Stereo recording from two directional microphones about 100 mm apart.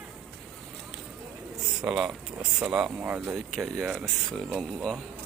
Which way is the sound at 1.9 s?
5° right (ahead or behind).